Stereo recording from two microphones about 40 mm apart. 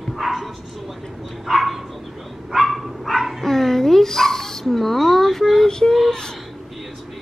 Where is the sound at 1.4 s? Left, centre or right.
Centre.